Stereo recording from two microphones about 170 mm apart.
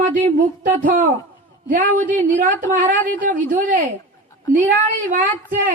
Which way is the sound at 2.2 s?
50° right (ahead or behind).